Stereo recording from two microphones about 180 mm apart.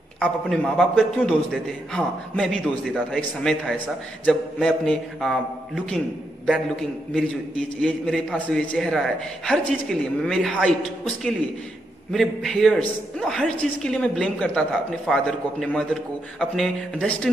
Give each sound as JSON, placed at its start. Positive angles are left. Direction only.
{"t": 0.2, "sound": "a man's voice", "side_deg": 0}
{"t": 4.3, "sound": "a man's voice", "side_deg": 0}
{"t": 6.4, "sound": "a man's voice", "side_deg": 5}
{"t": 12.1, "sound": "a man's voice", "side_deg": 0}